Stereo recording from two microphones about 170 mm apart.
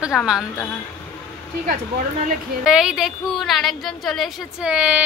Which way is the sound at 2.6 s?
5° right (ahead or behind).